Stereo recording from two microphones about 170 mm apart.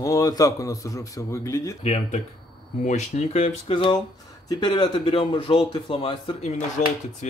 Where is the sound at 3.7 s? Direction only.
25° left (ahead or behind); by 6.8 s 45° left (ahead or behind).